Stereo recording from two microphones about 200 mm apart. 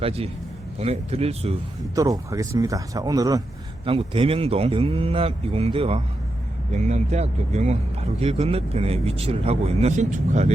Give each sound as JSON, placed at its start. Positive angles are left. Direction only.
{"t": 0.0, "sound": "speech", "side_deg": -30}
{"t": 2.0, "sound": "speech", "side_deg": -15}